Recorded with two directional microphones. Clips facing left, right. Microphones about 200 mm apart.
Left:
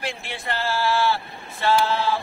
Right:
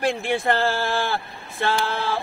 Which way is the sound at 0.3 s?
55° right (ahead or behind).